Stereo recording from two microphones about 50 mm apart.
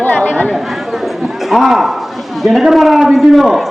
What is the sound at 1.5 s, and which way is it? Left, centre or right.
A man's voice, centre.